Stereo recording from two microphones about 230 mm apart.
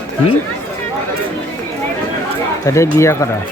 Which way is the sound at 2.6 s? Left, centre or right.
Centre.